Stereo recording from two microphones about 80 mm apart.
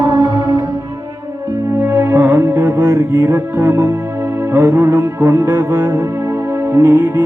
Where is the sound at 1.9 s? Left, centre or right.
Right.